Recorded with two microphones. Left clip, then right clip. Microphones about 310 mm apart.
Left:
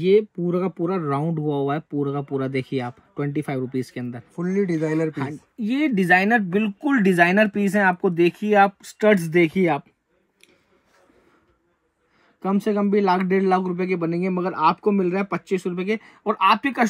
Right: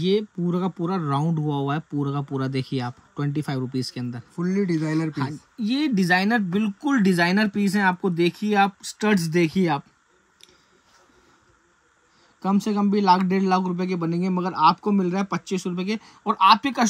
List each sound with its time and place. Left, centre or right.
0.0 s speech: centre
12.4 s speech: centre